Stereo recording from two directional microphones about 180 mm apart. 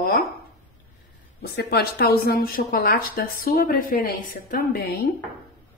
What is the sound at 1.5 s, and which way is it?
Speech, 60° left (ahead or behind).